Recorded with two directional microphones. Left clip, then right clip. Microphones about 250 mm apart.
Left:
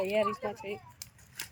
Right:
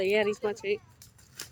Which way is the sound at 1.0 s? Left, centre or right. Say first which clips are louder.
Left 7 dB; left.